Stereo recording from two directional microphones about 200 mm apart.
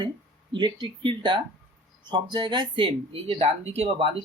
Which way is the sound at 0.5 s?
25° right (ahead or behind).